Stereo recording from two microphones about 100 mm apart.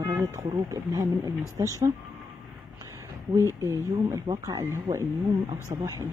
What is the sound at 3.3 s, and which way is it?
Speech, 30° right (ahead or behind).